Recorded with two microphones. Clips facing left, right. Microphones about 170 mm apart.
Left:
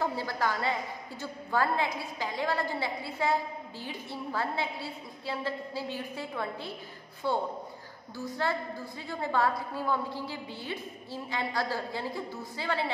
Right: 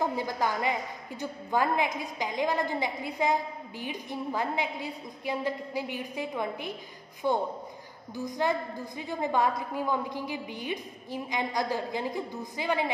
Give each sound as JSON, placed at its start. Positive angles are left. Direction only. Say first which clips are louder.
{"t": 0.0, "sound": "a woman's voice", "louder": "right 2 dB", "side_deg": -15}